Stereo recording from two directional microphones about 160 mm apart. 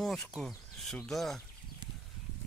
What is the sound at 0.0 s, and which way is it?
Speech, centre (ahead or behind).